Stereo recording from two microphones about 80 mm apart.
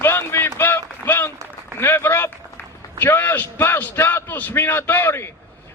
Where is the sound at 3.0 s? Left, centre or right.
Left.